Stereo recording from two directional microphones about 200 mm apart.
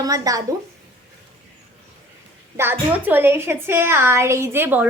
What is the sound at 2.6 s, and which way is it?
A woman's voice, 10° right (ahead or behind).